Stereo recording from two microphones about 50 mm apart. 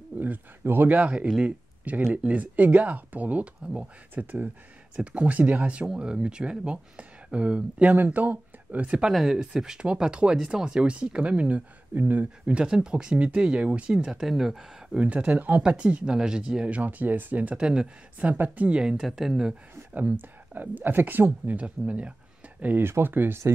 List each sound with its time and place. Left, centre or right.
0.2 s a sound: right
0.9 s speech: right
4.9 s speech: right
7.9 s speech: right
9.1 s speech: centre; by 12.6 s right
12.6 s speech: centre
14.2 s speech: centre
15.0 s speech: right
17.6 s speech: centre
18.2 s speech: right
18.8 s speech: centre
19.9 s speech: right
21.6 s speech: right
22.8 s speech: right